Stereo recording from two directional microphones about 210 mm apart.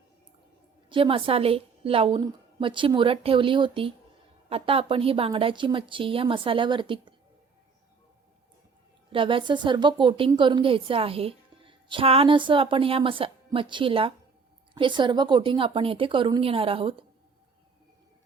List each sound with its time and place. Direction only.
0.9 s a woman's voice: 25° right (ahead or behind)
9.1 s a woman's voice: 25° right (ahead or behind)